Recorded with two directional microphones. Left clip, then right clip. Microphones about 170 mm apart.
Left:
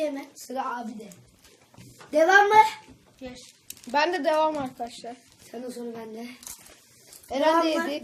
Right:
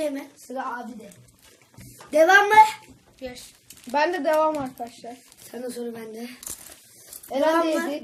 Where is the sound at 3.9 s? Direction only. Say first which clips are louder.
Right 2 dB; 10° right (ahead or behind).